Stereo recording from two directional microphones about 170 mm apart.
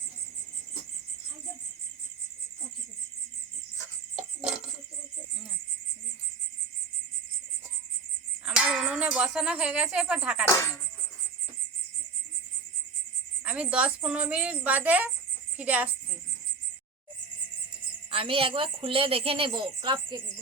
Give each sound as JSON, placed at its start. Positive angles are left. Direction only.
{"t": 8.4, "sound": "speech", "side_deg": -5}
{"t": 10.4, "sound": "speech", "side_deg": 15}
{"t": 13.4, "sound": "a woman's voice", "side_deg": -5}
{"t": 18.1, "sound": "a woman's voice", "side_deg": -35}